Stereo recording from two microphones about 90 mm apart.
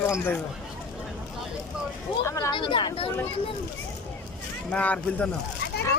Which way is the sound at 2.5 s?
60° left (ahead or behind).